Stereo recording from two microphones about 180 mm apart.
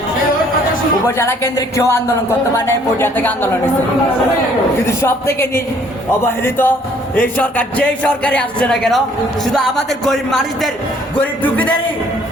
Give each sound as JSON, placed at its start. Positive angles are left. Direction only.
{"t": 1.0, "sound": "a man's voice", "side_deg": 15}
{"t": 4.9, "sound": "a man's voice", "side_deg": 15}
{"t": 10.1, "sound": "a man's voice", "side_deg": 0}